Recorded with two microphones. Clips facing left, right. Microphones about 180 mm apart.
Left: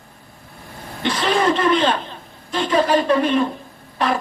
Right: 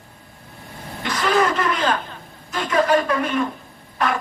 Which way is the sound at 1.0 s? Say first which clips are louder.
Even; 30° left (ahead or behind).